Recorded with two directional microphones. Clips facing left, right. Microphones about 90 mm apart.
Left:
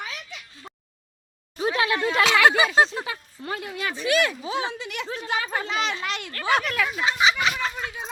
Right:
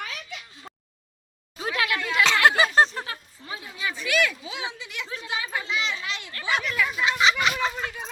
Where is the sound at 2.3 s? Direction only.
15° left (ahead or behind).